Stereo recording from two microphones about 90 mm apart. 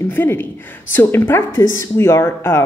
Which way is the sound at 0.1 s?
20° left (ahead or behind).